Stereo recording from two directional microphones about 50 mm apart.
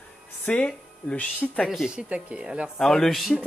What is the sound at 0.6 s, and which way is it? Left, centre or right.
Speech, left.